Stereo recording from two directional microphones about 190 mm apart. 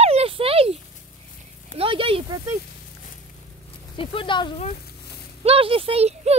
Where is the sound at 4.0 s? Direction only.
25° left (ahead or behind).